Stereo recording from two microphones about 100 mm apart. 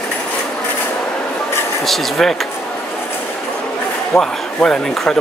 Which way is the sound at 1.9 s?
Centre (ahead or behind).